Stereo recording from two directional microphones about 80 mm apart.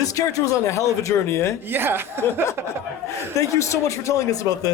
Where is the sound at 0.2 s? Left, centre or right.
Left.